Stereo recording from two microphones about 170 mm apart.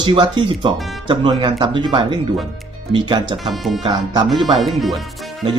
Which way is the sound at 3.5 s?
Centre (ahead or behind).